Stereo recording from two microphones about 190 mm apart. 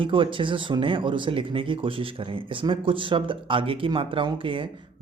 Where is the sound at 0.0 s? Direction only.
25° right (ahead or behind).